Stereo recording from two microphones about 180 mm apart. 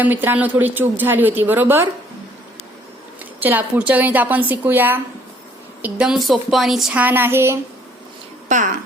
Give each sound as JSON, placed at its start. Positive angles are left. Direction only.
{"t": 0.0, "sound": "speech", "side_deg": -10}
{"t": 3.4, "sound": "speech", "side_deg": -10}
{"t": 8.4, "sound": "speech", "side_deg": -45}